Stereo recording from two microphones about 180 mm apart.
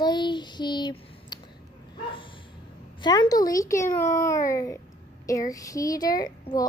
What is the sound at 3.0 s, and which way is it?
Speech, 25° left (ahead or behind).